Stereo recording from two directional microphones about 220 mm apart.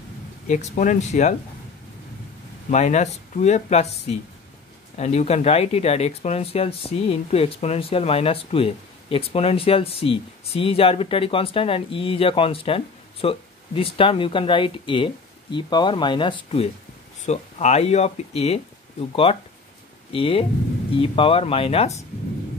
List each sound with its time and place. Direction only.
0.5 s speech: 35° left (ahead or behind)
2.7 s speech: 30° left (ahead or behind)